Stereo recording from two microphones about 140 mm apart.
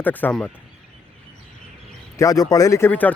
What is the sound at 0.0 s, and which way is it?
Speech, 10° left (ahead or behind).